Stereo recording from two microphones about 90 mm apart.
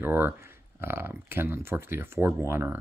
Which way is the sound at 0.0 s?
25° right (ahead or behind).